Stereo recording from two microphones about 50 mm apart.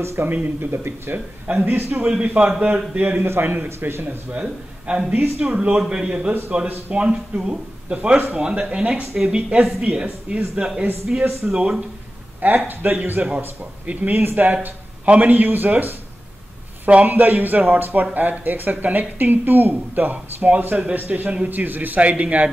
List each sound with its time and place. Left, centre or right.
0.2 s speech: right
2.2 s speech: right
3.2 s a man's voice: right
4.3 s a man's voice: right
12.4 s speech: right
21.5 s speech: right